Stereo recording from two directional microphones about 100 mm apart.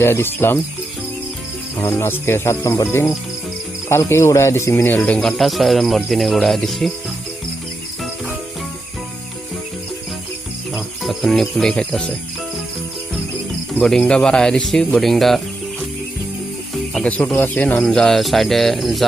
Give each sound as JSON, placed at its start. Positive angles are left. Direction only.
{"t": 0.0, "sound": "speech", "side_deg": 25}
{"t": 1.8, "sound": "speech", "side_deg": 25}
{"t": 5.4, "sound": "speech", "side_deg": 0}
{"t": 11.0, "sound": "cricket", "side_deg": 0}
{"t": 14.0, "sound": "speech", "side_deg": 10}
{"t": 16.9, "sound": "speech", "side_deg": 10}
{"t": 17.8, "sound": "speech", "side_deg": 5}